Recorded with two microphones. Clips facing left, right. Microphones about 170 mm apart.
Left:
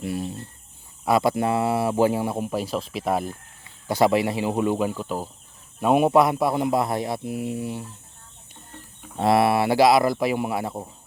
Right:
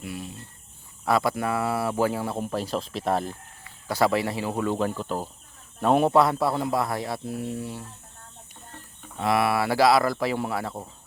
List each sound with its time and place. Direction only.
0.0 s speech: 35° left (ahead or behind)
1.0 s speech: 20° left (ahead or behind)
3.6 s speech: 20° left (ahead or behind)
9.1 s speech: 30° left (ahead or behind)